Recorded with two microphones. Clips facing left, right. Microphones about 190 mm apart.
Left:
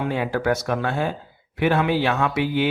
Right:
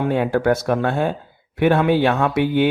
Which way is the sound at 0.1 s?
55° right (ahead or behind).